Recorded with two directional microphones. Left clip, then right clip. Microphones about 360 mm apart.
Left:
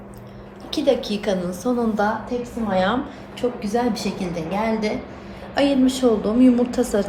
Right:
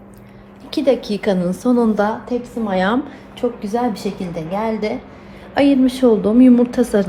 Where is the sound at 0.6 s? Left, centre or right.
Centre.